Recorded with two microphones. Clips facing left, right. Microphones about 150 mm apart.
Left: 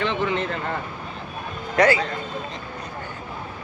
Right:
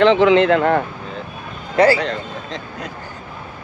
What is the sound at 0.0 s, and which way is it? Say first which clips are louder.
Speech: right 12 dB; 90° right.